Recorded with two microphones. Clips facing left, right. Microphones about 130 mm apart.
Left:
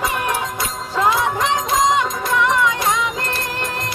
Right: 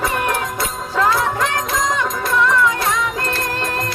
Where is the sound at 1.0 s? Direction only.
20° left (ahead or behind).